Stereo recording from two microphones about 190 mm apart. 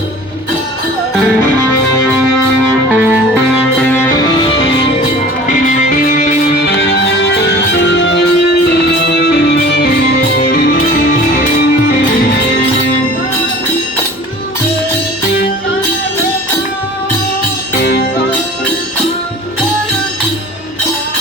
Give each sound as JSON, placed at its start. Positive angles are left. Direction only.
{"t": 2.9, "sound": "music", "side_deg": -10}
{"t": 3.8, "sound": "music", "side_deg": 10}
{"t": 4.2, "sound": "music", "side_deg": 25}
{"t": 5.5, "sound": "music", "side_deg": 45}
{"t": 6.7, "sound": "music", "side_deg": 70}